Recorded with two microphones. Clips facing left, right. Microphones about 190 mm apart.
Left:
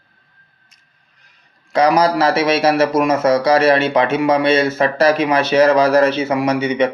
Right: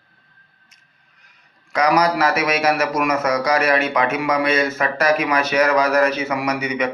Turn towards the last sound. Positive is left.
turn(degrees=30)  # may be behind; listen again after turning